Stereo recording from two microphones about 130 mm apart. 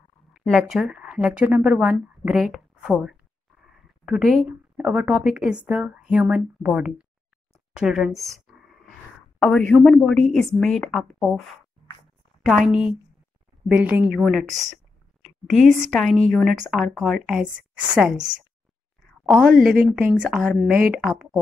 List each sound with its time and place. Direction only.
0.3 s a woman's voice: centre (ahead or behind)
8.5 s a sound: 5° right (ahead or behind)
9.4 s a woman's voice: 10° left (ahead or behind)
12.4 s a woman's voice: centre (ahead or behind)
14.2 s a woman's voice: centre (ahead or behind)
19.5 s a woman's voice: 90° right
19.8 s a woman's voice: 10° right (ahead or behind)